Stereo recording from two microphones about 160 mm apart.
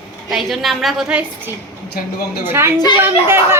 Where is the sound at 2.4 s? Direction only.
15° right (ahead or behind).